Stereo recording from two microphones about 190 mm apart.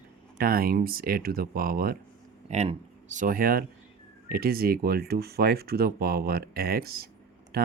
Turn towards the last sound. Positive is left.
turn(degrees=-55)  # may be behind; listen again after turning